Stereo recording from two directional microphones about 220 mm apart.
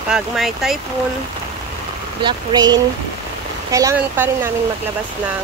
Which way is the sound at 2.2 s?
20° right (ahead or behind).